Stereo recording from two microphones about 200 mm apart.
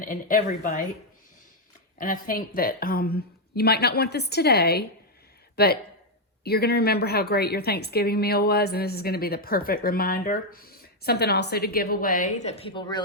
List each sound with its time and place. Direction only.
0.0 s speech: 40° left (ahead or behind)
2.0 s a woman's voice: 45° left (ahead or behind); by 13.0 s 25° left (ahead or behind)